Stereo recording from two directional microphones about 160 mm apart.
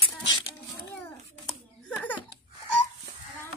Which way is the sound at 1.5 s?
10° left (ahead or behind).